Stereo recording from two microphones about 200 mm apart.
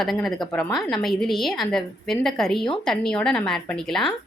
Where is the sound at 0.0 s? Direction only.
Centre (ahead or behind).